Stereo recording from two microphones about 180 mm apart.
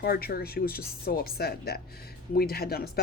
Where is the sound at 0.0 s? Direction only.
60° left (ahead or behind).